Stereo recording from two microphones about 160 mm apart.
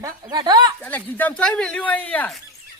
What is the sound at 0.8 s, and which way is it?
Speech, 10° left (ahead or behind).